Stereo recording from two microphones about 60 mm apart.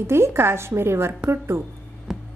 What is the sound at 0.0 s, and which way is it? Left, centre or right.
A woman's voice, right.